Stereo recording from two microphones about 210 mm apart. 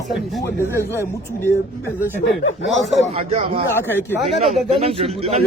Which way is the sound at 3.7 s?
10° left (ahead or behind).